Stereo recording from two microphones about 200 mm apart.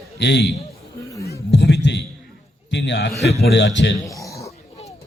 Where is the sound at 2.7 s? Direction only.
60° left (ahead or behind).